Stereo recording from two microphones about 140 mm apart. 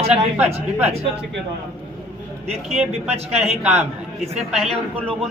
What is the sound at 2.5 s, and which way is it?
Speech, 50° right (ahead or behind).